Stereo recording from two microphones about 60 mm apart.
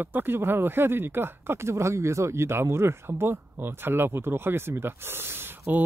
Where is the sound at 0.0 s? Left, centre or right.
Right.